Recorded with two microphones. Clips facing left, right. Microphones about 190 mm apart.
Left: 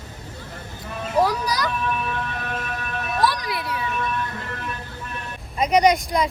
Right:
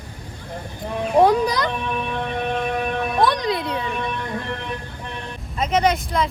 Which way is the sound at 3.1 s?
20° right (ahead or behind).